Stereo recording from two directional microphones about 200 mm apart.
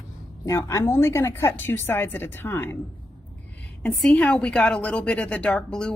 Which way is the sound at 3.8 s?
5° left (ahead or behind).